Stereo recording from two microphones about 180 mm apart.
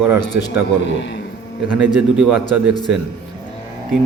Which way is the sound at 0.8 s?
80° left.